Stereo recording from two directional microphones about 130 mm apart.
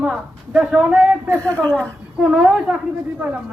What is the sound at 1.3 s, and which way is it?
Speech, 20° right (ahead or behind).